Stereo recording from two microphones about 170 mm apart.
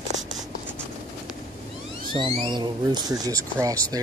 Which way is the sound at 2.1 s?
30° right (ahead or behind).